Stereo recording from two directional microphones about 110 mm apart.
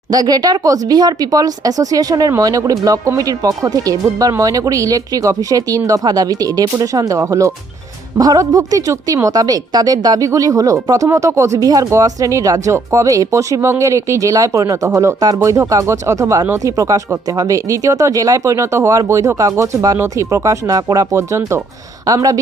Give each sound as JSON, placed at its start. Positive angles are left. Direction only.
{"t": 0.1, "sound": "speech", "side_deg": -35}